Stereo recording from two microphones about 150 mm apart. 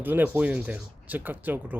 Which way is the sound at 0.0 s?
10° right (ahead or behind).